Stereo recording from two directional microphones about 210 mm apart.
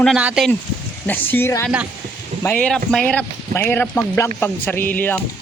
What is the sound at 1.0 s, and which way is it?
Speech, 10° left (ahead or behind).